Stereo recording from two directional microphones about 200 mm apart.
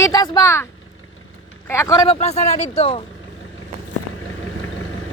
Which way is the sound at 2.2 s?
30° left (ahead or behind).